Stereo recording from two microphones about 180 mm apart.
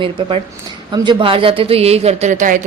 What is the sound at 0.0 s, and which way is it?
A woman's voice, 30° right (ahead or behind).